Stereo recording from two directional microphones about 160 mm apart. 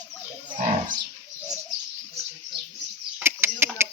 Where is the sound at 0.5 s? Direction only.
55° right (ahead or behind).